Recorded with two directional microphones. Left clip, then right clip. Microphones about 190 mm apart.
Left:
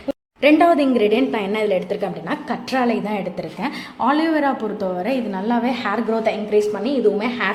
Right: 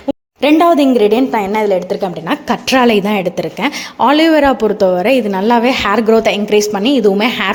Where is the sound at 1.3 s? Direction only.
10° right (ahead or behind).